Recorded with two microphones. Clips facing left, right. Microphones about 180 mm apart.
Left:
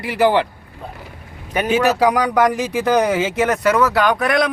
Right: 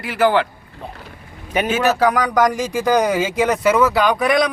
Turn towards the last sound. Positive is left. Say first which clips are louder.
# right 1 dB
turn(degrees=0)  # may be behind; listen again after turning